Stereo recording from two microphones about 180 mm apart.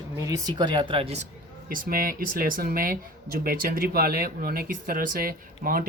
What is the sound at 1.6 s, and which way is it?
Speech, 50° right (ahead or behind).